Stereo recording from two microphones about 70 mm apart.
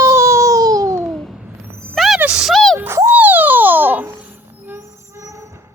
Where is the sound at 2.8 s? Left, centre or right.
Right.